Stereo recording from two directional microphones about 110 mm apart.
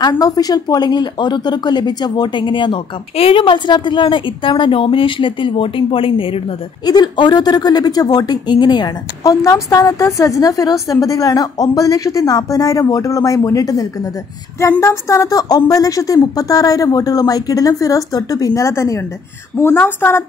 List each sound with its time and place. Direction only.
0.2 s speech: 35° left (ahead or behind); by 6.4 s 55° left (ahead or behind)
6.9 s a woman's voice: 40° left (ahead or behind); by 20.2 s 20° left (ahead or behind)